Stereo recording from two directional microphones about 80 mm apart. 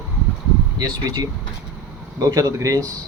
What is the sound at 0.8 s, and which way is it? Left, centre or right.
Speech, right.